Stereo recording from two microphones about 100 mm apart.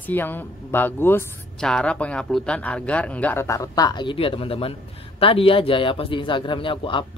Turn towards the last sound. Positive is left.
turn(degrees=60)  # may be behind; listen again after turning